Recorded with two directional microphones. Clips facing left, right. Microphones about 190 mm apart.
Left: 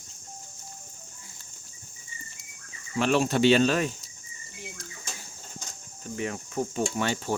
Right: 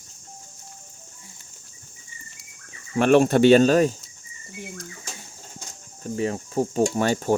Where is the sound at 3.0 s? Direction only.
55° right (ahead or behind).